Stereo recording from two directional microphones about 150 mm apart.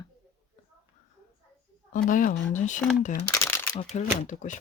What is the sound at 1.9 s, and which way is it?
Speech, 60° left (ahead or behind).